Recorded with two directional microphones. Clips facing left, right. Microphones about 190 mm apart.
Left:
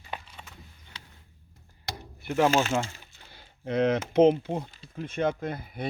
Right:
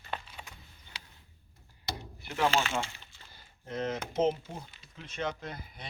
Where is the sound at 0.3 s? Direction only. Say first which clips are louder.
Even; 5° right (ahead or behind).